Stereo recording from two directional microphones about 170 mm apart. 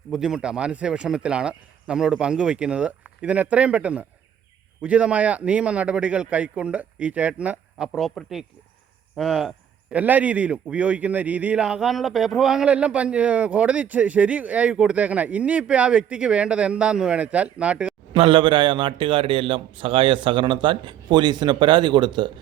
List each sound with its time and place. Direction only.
0.1 s a man's voice: 5° right (ahead or behind)
18.1 s a man's voice: 30° right (ahead or behind)